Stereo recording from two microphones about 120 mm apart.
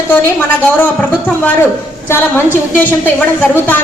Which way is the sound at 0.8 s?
15° left (ahead or behind).